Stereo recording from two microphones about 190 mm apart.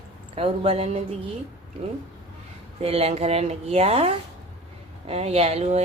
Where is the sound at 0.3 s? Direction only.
30° right (ahead or behind).